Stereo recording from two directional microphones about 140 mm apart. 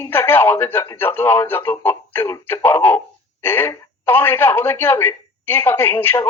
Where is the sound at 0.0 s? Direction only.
15° left (ahead or behind).